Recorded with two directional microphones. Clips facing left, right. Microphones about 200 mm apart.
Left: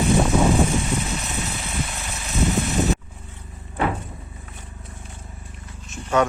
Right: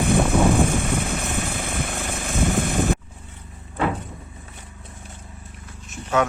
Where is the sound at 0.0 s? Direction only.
55° right (ahead or behind).